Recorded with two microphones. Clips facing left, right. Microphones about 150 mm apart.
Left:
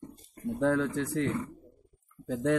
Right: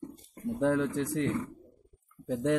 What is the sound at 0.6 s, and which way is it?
A man's voice, 20° right (ahead or behind).